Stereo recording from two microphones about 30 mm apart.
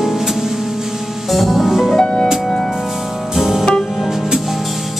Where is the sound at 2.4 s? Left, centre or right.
Centre.